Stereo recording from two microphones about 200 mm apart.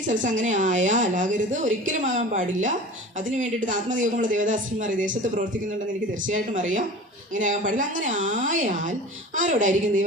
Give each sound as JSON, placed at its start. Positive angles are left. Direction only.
{"t": 0.1, "sound": "speech", "side_deg": -40}